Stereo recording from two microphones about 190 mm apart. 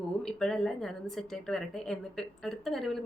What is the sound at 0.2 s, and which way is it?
A woman's voice, 5° left (ahead or behind).